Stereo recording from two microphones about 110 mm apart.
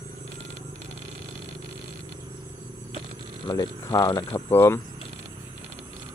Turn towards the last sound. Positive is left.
turn(degrees=25)  # may be behind; listen again after turning